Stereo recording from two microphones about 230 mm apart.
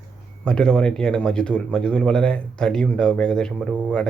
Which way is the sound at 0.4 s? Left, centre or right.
Centre.